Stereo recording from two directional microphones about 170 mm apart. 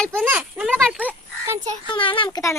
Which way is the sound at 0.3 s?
10° right (ahead or behind).